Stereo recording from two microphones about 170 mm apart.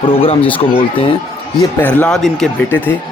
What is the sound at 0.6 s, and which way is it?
Speech, 30° left (ahead or behind).